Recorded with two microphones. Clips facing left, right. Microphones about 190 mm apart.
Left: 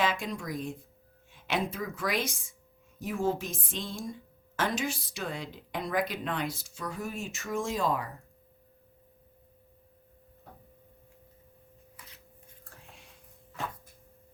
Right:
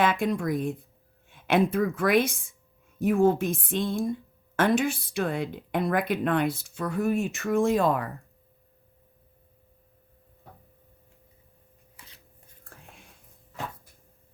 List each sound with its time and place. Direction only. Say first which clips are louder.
0.0 s speech: right 6 dB; 55° right (ahead or behind)
12.0 s shuffling cards: right 1 dB; 30° right (ahead or behind)